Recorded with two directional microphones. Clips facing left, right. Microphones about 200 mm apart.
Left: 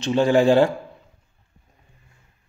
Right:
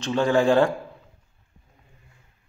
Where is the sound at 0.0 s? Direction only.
25° left (ahead or behind).